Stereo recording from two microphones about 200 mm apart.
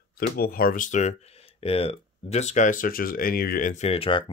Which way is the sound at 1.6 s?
30° left (ahead or behind).